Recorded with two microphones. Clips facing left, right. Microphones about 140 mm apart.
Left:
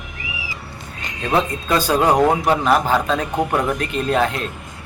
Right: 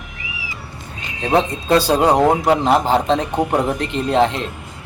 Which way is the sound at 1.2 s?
30° right (ahead or behind).